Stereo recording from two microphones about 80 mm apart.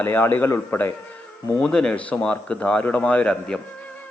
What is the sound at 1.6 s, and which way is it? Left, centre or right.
A man's voice, centre.